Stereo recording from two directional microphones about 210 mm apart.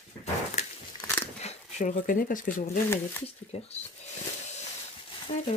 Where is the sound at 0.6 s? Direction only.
30° left (ahead or behind).